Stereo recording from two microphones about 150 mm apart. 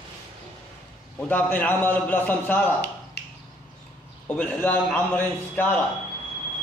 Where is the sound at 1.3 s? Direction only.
10° left (ahead or behind).